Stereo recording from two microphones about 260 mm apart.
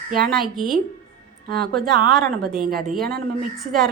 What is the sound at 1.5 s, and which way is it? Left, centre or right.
A woman's voice, right.